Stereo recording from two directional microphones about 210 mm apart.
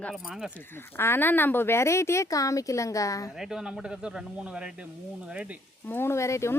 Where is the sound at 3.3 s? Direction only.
Centre (ahead or behind).